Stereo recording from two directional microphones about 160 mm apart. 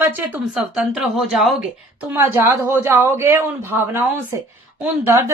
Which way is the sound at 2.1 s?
15° right (ahead or behind).